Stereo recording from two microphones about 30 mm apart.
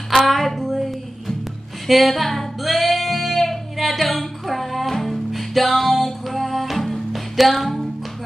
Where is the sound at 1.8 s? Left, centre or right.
Centre.